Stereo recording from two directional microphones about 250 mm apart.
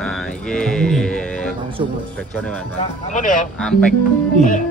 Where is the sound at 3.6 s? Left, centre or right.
Centre.